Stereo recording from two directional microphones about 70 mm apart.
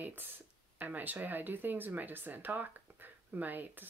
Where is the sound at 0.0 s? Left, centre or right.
Right.